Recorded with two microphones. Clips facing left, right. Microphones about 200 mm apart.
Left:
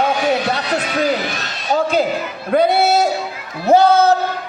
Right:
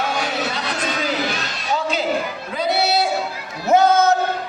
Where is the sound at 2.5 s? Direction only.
55° left (ahead or behind).